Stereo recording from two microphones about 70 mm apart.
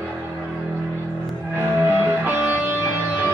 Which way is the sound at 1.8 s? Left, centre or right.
Right.